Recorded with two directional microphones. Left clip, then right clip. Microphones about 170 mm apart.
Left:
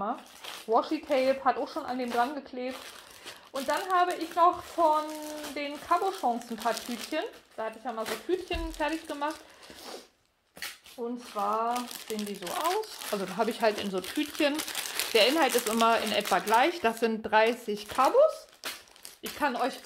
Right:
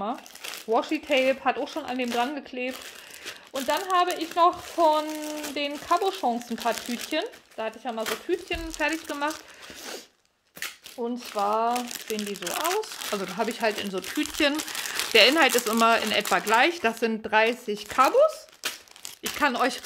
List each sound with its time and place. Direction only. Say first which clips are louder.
0.0 s speech: right 2 dB; 35° right (ahead or behind)
7.2 s speech: right 3 dB; 35° right (ahead or behind)
11.0 s speech: right 5 dB; 40° right (ahead or behind); by 12.8 s 55° right (ahead or behind)
13.1 s speech: right 1 dB; 20° right (ahead or behind)
19.3 s speech: right 5 dB; 40° right (ahead or behind)